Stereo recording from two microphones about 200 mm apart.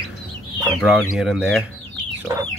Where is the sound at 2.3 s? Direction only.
15° right (ahead or behind).